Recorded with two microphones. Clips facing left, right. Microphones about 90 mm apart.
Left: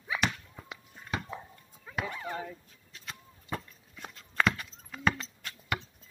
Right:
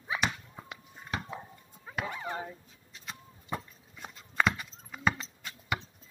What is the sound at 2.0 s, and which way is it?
Bow-wow, 20° right (ahead or behind).